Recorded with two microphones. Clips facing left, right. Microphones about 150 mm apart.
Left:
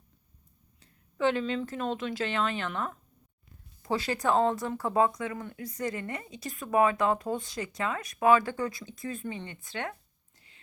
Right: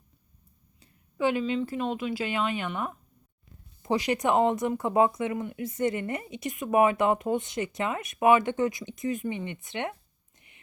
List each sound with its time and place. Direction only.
0.8 s speech: 10° right (ahead or behind)